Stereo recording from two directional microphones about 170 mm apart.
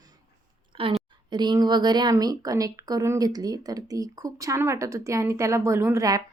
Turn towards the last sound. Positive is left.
turn(degrees=-20)  # may be behind; listen again after turning